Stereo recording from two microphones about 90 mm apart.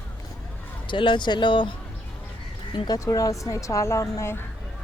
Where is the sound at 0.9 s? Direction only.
65° left (ahead or behind).